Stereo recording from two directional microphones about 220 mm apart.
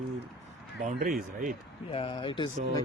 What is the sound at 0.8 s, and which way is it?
Speech, 40° right (ahead or behind).